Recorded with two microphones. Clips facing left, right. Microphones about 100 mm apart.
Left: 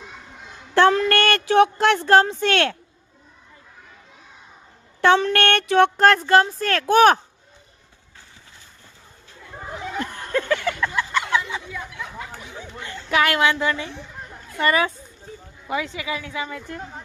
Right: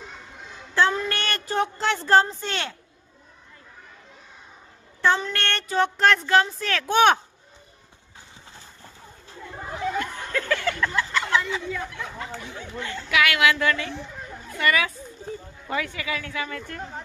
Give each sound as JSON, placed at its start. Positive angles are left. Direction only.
{"t": 0.7, "sound": "speech", "side_deg": 70}
{"t": 4.9, "sound": "speech", "side_deg": 70}
{"t": 6.0, "sound": "speech", "side_deg": 45}
{"t": 10.3, "sound": "a sound", "side_deg": 20}
{"t": 11.9, "sound": "speech", "side_deg": 5}
{"t": 13.1, "sound": "speech", "side_deg": 40}
{"t": 13.4, "sound": "a woman's voice", "side_deg": 25}
{"t": 14.6, "sound": "speech", "side_deg": 30}
{"t": 15.6, "sound": "a woman's voice", "side_deg": 15}